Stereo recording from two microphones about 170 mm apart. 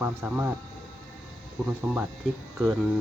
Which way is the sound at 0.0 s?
10° right (ahead or behind).